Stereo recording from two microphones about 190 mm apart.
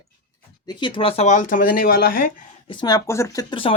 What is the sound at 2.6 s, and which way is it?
Speech, 25° left (ahead or behind).